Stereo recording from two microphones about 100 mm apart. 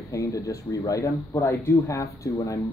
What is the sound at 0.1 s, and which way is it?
Speech, 30° left (ahead or behind).